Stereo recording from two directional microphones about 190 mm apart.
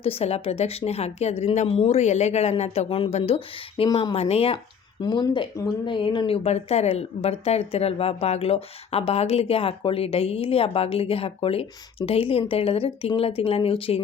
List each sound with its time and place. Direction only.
0.0 s speech: 30° left (ahead or behind)